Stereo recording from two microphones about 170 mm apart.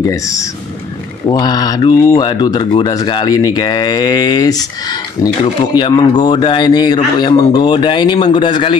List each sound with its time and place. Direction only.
0.0 s speech: 20° left (ahead or behind)